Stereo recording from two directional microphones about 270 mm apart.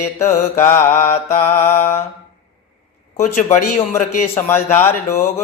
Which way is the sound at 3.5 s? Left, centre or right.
Left.